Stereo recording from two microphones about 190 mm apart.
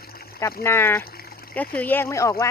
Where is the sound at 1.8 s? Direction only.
10° left (ahead or behind).